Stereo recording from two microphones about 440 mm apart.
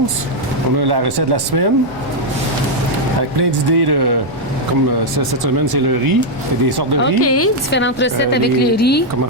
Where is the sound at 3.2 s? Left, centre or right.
Right.